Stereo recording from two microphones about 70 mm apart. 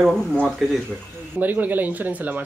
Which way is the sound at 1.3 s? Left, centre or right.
Right.